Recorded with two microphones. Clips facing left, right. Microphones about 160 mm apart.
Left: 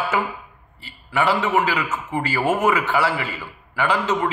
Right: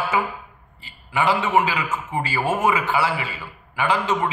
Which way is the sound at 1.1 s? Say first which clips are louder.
Even; 15° right (ahead or behind).